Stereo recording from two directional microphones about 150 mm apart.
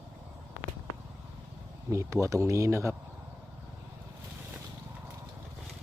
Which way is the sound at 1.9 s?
20° right (ahead or behind).